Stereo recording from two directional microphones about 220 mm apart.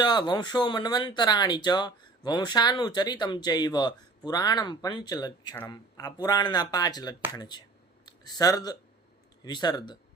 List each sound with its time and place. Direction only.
0.0 s speech: 20° left (ahead or behind)